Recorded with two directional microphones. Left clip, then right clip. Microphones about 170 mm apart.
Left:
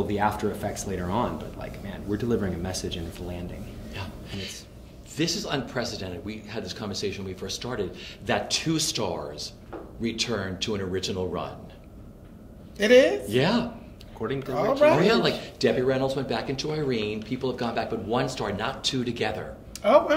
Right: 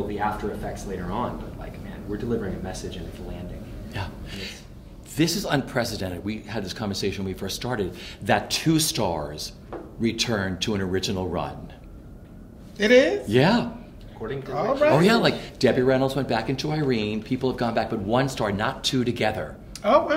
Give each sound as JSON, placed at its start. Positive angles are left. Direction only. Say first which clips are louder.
{"t": 0.1, "sound": "speech", "louder": "left 2 dB", "side_deg": 30}
{"t": 2.1, "sound": "speech", "louder": "left 1 dB", "side_deg": 30}
{"t": 3.9, "sound": "a sound", "louder": "right 3 dB", "side_deg": -30}
{"t": 5.1, "sound": "a man's voice", "louder": "right 4 dB", "side_deg": -30}
{"t": 12.7, "sound": "speech", "louder": "even", "side_deg": 0}
{"t": 13.3, "sound": "a man's voice", "louder": "right 4 dB", "side_deg": -30}
{"t": 14.5, "sound": "speech", "louder": "even", "side_deg": 5}
{"t": 15.0, "sound": "speech", "louder": "right 2 dB", "side_deg": -35}
{"t": 19.8, "sound": "speech", "louder": "even", "side_deg": 0}